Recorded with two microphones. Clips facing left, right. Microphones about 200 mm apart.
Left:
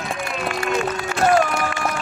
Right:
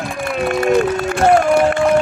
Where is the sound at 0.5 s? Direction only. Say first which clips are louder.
Right 9 dB; 55° right (ahead or behind).